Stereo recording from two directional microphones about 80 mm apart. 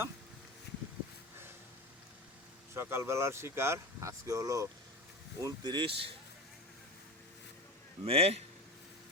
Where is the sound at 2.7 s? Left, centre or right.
Right.